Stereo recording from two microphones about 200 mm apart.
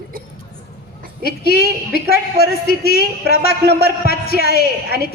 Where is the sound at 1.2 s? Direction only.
50° left (ahead or behind).